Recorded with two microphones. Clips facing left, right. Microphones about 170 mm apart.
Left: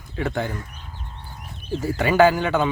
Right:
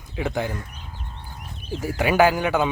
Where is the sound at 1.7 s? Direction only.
10° right (ahead or behind).